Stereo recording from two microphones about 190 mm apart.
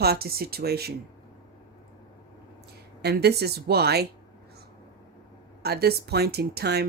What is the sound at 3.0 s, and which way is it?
Speech, 60° right (ahead or behind).